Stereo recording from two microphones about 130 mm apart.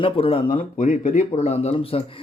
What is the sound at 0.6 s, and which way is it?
Speech, 75° left (ahead or behind).